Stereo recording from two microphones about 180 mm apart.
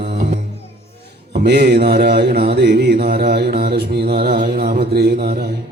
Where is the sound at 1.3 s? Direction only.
70° right (ahead or behind).